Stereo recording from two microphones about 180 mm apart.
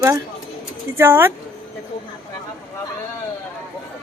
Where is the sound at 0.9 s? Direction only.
10° right (ahead or behind).